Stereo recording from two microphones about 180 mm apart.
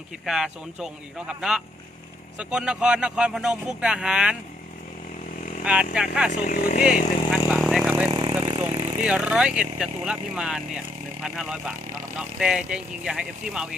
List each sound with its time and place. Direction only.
0.3 s speech: 5° right (ahead or behind)
5.6 s speech: 5° right (ahead or behind)
6.4 s speech: 50° left (ahead or behind)
6.8 s vehicle: 5° right (ahead or behind)
8.1 s vehicle: 25° right (ahead or behind)
9.0 s speech: 5° right (ahead or behind)